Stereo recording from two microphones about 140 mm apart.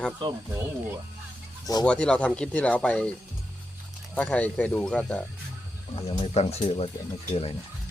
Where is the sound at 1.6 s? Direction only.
30° left (ahead or behind).